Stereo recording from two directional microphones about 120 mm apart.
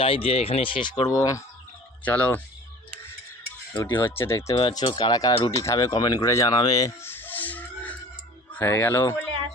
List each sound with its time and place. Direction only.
0.0 s speech: 50° left (ahead or behind)
1.0 s speech: 30° left (ahead or behind)
2.0 s speech: 10° left (ahead or behind)
3.9 s speech: 20° left (ahead or behind)
4.5 s speech: 40° left (ahead or behind); by 6.5 s 25° left (ahead or behind)
6.5 s music: 35° left (ahead or behind); by 7.9 s 15° left (ahead or behind)
8.5 s speech: 20° left (ahead or behind)